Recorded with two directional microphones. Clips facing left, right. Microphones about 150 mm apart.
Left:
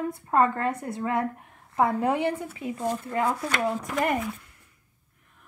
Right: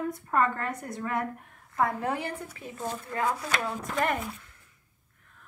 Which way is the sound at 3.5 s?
Centre (ahead or behind).